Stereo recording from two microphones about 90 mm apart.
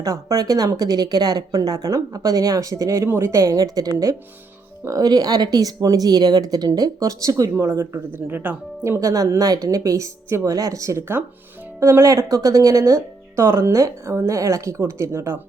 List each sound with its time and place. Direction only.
0.0 s speech: 40° right (ahead or behind)